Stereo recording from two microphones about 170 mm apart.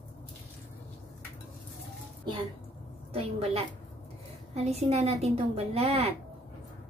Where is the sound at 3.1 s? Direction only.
35° right (ahead or behind).